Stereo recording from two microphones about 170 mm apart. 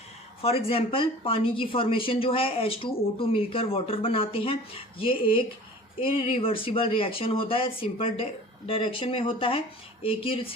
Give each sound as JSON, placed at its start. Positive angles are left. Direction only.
{"t": 0.4, "sound": "a woman's voice", "side_deg": 35}